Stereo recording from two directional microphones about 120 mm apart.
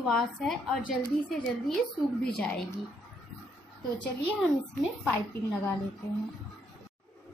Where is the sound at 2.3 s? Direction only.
10° left (ahead or behind).